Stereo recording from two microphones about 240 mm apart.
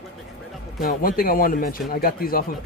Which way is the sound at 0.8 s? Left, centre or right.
Left.